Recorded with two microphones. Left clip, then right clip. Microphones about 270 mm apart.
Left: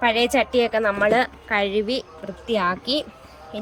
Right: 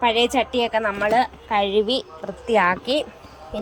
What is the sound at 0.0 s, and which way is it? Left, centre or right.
A woman's voice, centre.